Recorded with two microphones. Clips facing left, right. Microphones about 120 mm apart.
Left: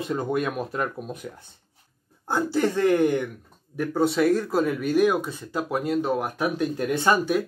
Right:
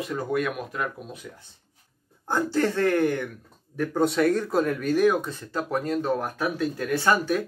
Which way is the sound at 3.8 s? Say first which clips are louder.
Left 1 dB; 5° left (ahead or behind).